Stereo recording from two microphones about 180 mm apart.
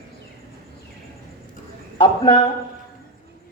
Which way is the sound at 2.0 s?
30° left (ahead or behind).